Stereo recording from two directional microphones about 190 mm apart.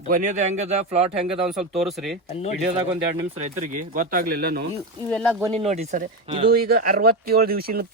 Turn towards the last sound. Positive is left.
turn(degrees=-55)  # may be behind; listen again after turning